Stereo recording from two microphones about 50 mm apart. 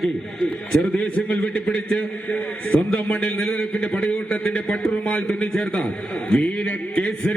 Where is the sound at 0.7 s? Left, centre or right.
Left.